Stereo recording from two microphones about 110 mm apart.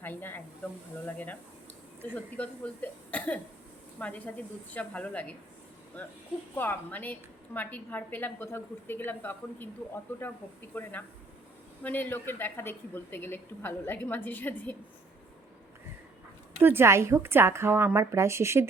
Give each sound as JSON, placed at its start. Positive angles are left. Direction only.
{"t": 0.0, "sound": "a woman's voice", "side_deg": 20}
{"t": 6.6, "sound": "a woman's voice", "side_deg": 15}
{"t": 16.6, "sound": "a woman's voice", "side_deg": -20}